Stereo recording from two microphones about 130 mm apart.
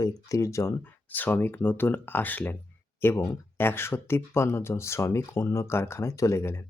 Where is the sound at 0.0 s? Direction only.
25° left (ahead or behind).